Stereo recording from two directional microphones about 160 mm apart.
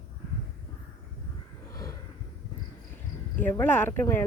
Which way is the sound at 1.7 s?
20° left (ahead or behind).